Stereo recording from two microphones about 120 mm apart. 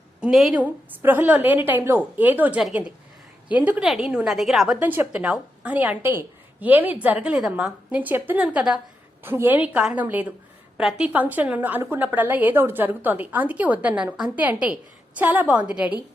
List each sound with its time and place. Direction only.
0.2 s speech: 5° right (ahead or behind)
0.6 s a woman's voice: 15° right (ahead or behind)
4.8 s a woman's voice: 15° right (ahead or behind)